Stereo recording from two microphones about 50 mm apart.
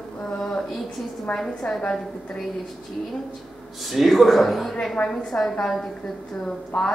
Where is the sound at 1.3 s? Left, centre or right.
Left.